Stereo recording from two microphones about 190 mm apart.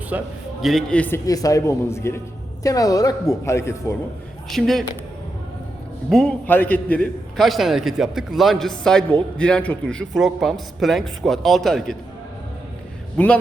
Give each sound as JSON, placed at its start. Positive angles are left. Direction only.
{"t": 0.1, "sound": "a man's voice", "side_deg": -10}
{"t": 0.6, "sound": "a man's voice", "side_deg": 0}
{"t": 4.4, "sound": "a man's voice", "side_deg": 0}
{"t": 6.1, "sound": "a man's voice", "side_deg": 5}
{"t": 13.2, "sound": "a man's voice", "side_deg": 5}